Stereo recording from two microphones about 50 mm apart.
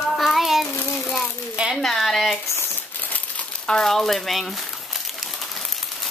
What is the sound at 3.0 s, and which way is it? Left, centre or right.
Crumpling, left.